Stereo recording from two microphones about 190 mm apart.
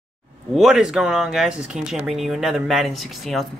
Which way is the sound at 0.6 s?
5° right (ahead or behind).